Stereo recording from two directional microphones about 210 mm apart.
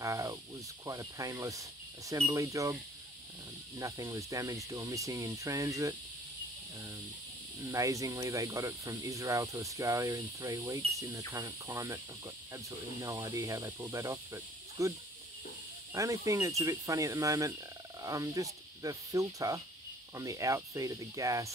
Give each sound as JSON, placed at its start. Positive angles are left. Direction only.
{"t": 0.0, "sound": "snake", "side_deg": -15}
{"t": 0.8, "sound": "speech", "side_deg": -15}
{"t": 7.6, "sound": "speech", "side_deg": -15}